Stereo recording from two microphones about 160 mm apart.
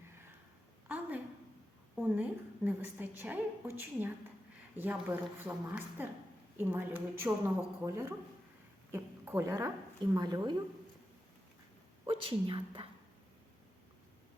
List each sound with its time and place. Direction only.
0.9 s a sound: 10° right (ahead or behind)
2.0 s a woman's voice: 10° right (ahead or behind)
6.6 s a woman's voice: 10° right (ahead or behind)
12.0 s a woman's voice: 35° right (ahead or behind)